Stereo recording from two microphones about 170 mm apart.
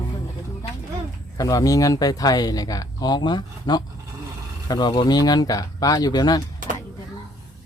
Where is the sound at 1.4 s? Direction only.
20° left (ahead or behind).